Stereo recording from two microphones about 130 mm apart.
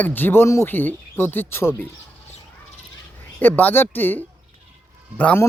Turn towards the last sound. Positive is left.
turn(degrees=10)  # may be behind; listen again after turning